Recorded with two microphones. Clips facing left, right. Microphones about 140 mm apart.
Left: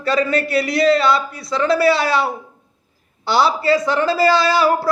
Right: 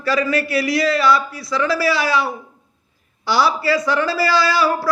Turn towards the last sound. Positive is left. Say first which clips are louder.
# left 2 dB
turn(degrees=20)  # may be behind; listen again after turning